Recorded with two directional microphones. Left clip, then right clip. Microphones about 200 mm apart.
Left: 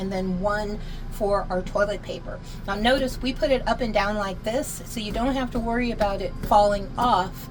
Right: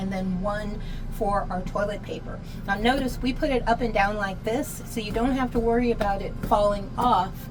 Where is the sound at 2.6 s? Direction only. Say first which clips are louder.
Left 2 dB; 40° left (ahead or behind).